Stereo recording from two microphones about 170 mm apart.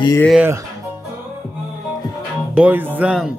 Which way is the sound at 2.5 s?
10° right (ahead or behind).